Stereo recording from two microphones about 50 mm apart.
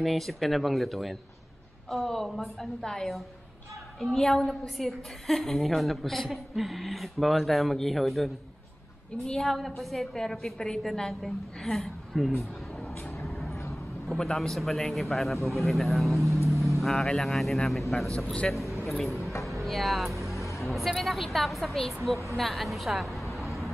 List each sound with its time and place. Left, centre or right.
0.0 s a woman's voice: centre
16.4 s vehicle: centre
16.9 s a woman's voice: centre
17.2 s a woman's voice: centre
18.2 s a man's voice: left
18.5 s a man's voice: centre
20.3 s vehicle: left
20.6 s a woman's voice: centre